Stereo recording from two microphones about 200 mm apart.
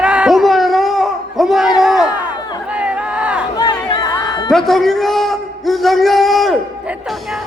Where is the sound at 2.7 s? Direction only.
5° right (ahead or behind).